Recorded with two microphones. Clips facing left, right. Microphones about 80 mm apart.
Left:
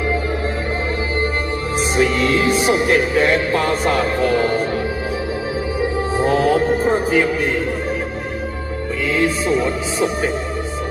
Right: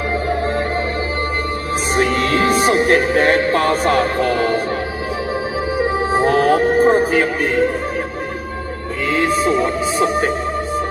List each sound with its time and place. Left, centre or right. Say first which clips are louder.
2.0 s music: even; right
6.2 s music: right 1 dB; right
9.0 s music: right 2 dB; right